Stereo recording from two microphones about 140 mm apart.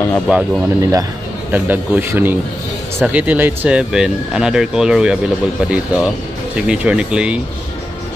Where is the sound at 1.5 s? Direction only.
15° right (ahead or behind).